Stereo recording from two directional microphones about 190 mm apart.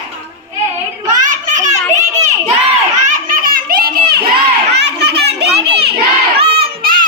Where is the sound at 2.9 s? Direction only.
45° right (ahead or behind).